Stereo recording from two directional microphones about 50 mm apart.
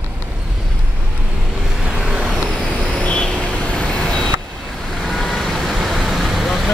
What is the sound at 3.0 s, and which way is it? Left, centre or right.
Vehicle, left.